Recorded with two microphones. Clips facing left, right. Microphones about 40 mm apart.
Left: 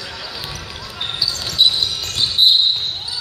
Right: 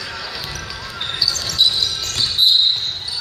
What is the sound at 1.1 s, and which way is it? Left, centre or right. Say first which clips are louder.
Basketball bounce: left 1 dB; centre.